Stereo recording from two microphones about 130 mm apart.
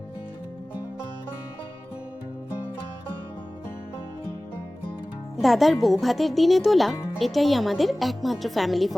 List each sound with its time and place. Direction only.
5.4 s a woman's voice: centre (ahead or behind)